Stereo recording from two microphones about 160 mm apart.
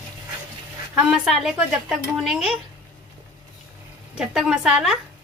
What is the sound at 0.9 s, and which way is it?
Speech, 5° right (ahead or behind).